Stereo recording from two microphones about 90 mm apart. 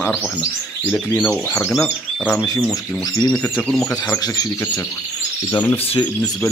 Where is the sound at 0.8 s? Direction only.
20° left (ahead or behind).